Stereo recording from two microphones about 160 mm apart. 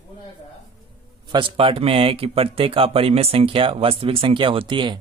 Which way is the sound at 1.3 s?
30° right (ahead or behind).